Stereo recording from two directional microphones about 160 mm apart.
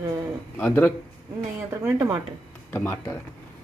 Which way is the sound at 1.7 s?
25° right (ahead or behind).